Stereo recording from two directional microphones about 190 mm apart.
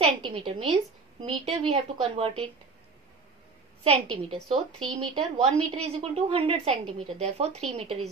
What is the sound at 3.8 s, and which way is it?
A woman's voice, 30° right (ahead or behind).